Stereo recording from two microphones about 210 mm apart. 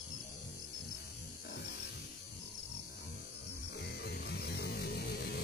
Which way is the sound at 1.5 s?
55° left (ahead or behind).